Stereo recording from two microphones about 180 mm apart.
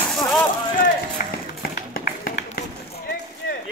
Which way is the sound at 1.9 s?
55° left (ahead or behind).